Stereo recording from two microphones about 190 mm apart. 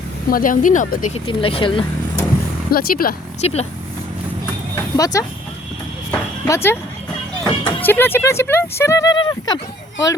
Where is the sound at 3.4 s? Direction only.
35° left (ahead or behind).